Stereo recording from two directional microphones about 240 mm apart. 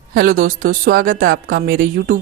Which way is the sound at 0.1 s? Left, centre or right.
Right.